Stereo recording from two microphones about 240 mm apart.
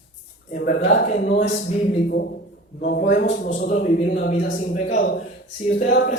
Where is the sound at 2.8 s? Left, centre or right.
Left.